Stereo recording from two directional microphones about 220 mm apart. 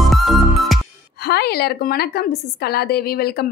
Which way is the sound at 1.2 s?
45° left (ahead or behind).